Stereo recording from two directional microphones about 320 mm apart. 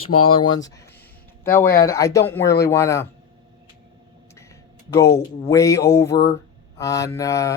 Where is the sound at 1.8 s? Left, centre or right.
Centre.